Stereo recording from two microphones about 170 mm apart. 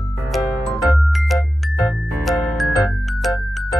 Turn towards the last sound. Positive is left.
turn(degrees=0)  # may be behind; listen again after turning